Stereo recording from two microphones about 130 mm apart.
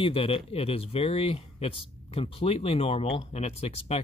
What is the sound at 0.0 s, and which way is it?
Speech, 45° left (ahead or behind).